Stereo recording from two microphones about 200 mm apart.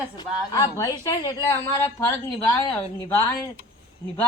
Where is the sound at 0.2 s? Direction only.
20° left (ahead or behind).